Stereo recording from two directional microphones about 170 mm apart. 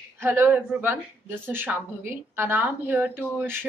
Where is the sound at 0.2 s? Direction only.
10° right (ahead or behind).